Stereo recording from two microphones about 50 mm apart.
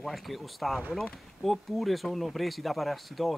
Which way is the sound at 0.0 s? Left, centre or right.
Centre.